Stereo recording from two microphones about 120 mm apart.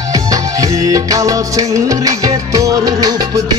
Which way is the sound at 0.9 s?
30° right (ahead or behind).